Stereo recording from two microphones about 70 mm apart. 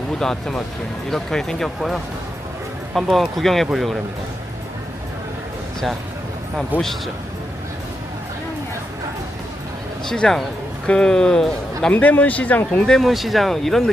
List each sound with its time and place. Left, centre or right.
0.2 s speech: centre
6.7 s a man's voice: right
10.1 s speech: centre
11.9 s speech: left
12.9 s speech: centre